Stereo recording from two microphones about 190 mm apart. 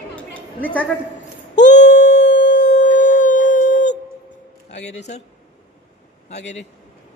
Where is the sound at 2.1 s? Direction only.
70° left (ahead or behind).